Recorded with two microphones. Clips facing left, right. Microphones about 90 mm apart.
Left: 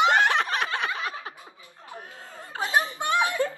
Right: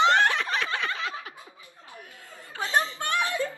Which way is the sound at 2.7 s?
15° left (ahead or behind).